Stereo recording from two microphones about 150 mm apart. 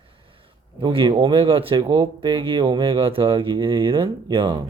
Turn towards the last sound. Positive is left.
turn(degrees=-35)  # may be behind; listen again after turning